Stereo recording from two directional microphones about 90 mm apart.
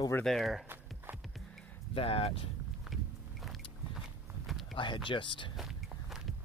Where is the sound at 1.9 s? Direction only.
90° left.